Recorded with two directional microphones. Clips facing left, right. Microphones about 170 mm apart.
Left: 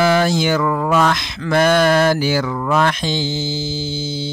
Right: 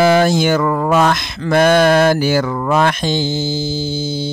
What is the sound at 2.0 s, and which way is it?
Mantra, 50° right (ahead or behind).